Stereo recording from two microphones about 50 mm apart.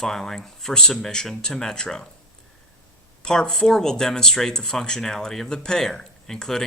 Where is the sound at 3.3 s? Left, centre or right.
Centre.